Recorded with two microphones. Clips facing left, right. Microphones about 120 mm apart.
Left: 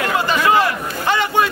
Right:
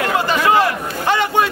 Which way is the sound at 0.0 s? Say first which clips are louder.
Right 1 dB; 40° right (ahead or behind).